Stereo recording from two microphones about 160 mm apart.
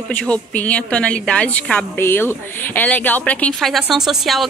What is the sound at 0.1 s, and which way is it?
A woman's voice, 10° left (ahead or behind).